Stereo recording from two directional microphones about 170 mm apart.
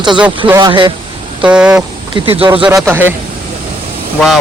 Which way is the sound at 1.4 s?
5° right (ahead or behind).